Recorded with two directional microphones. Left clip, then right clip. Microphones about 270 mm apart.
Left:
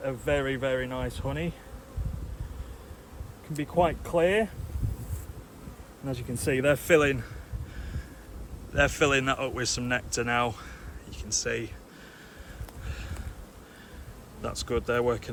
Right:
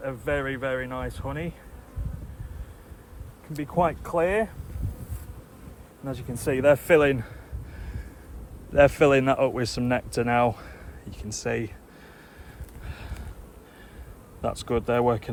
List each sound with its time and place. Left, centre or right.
0.0 s speech: centre
3.5 s speech: centre
6.1 s speech: centre
8.7 s speech: centre
12.9 s a sound: centre
14.4 s speech: centre